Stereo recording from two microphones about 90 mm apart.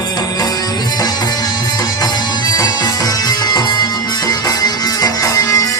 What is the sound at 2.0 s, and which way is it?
Music, 45° left (ahead or behind).